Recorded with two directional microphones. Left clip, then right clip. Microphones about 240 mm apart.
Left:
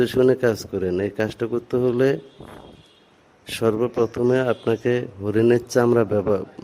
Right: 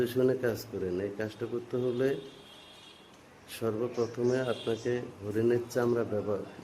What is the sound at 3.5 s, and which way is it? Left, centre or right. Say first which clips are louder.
A man's voice: left 12 dB; left.